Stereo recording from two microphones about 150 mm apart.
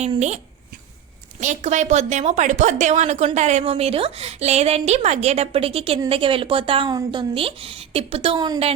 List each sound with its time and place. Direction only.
1.4 s a woman's voice: 55° right (ahead or behind); by 8.5 s 35° right (ahead or behind)